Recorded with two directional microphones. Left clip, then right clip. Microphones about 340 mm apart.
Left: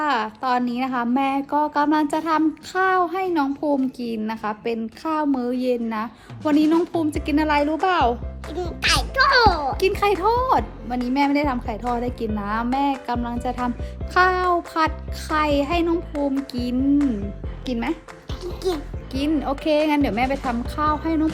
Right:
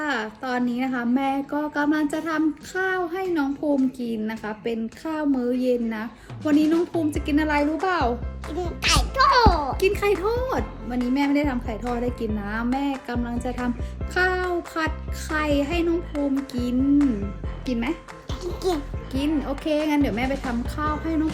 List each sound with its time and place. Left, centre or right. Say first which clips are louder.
0.0 s speech: left 5 dB; centre
6.7 s a child's voice: left 2 dB; centre
7.1 s a child's voice: left 2 dB; centre
9.8 s speech: left 3 dB; centre
18.4 s a child's voice: even; centre
19.1 s speech: left 3 dB; centre
20.2 s a child's voice: left 4 dB; centre
20.7 s speech: left 5 dB; centre